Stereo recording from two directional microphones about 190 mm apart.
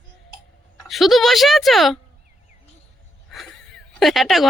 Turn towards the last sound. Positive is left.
turn(degrees=0)  # may be behind; listen again after turning